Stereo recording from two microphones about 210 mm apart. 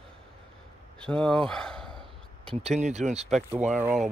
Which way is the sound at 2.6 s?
35° right (ahead or behind).